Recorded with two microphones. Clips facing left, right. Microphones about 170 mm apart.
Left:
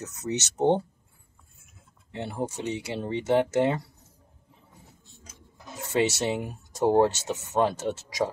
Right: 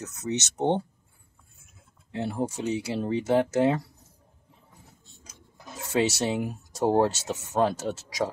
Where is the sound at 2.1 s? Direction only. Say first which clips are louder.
Right 2 dB; 5° right (ahead or behind).